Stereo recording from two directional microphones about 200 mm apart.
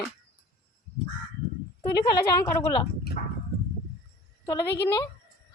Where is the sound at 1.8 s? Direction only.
20° left (ahead or behind).